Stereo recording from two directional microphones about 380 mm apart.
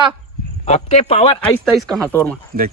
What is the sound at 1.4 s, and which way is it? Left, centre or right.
Speech, centre.